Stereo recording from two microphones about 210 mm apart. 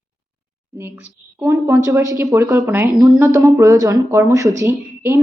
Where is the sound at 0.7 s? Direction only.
10° right (ahead or behind).